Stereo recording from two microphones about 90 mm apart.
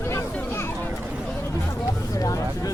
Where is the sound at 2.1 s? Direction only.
40° left (ahead or behind).